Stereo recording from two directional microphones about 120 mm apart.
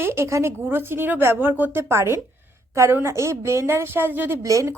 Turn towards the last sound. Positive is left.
turn(degrees=-25)  # may be behind; listen again after turning